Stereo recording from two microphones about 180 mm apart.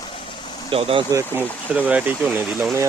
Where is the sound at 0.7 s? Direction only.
30° right (ahead or behind).